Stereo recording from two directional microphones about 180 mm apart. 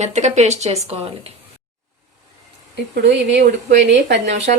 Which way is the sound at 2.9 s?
65° right (ahead or behind).